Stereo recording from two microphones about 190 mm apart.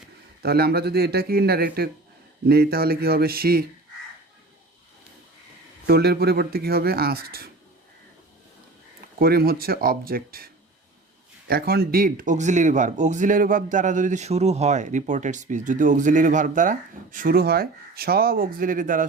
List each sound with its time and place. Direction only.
0.4 s speech: 55° right (ahead or behind)
5.8 s speech: 55° right (ahead or behind)
9.1 s speech: 50° right (ahead or behind)